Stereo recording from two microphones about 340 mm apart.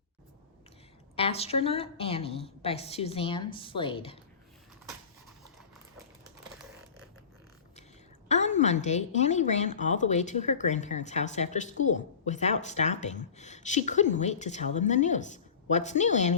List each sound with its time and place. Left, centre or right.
1.1 s a woman's voice: centre
8.3 s a woman's voice: left